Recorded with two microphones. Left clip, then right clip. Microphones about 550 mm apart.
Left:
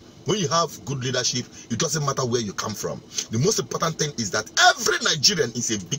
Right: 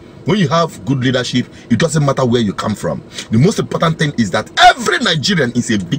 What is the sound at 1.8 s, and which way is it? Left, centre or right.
Speech, left.